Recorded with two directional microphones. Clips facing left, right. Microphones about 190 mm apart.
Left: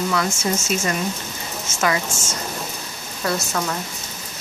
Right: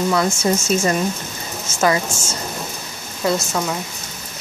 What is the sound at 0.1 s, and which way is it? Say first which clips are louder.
Speech: right 4 dB; 30° right (ahead or behind).